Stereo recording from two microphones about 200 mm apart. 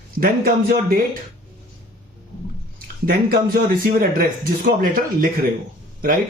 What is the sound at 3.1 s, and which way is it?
Speech, 45° right (ahead or behind).